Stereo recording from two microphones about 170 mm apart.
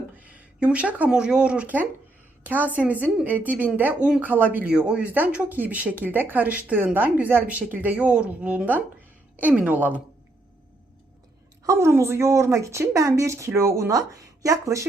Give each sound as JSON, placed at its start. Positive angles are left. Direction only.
{"t": 0.2, "sound": "speech", "side_deg": -5}
{"t": 11.6, "sound": "speech", "side_deg": -15}